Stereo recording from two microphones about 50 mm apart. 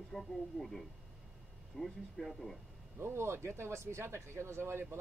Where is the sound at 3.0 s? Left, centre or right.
Right.